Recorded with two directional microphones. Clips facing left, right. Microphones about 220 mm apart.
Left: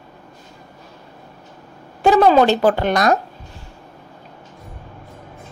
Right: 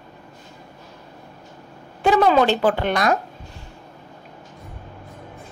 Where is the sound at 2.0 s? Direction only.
40° left (ahead or behind).